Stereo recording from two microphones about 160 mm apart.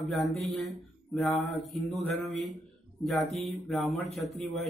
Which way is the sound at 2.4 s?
Centre (ahead or behind).